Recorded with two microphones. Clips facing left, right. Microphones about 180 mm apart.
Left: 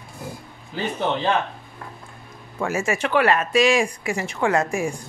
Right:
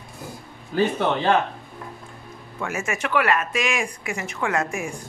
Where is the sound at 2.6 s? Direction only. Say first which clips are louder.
Left 4 dB; 30° left (ahead or behind).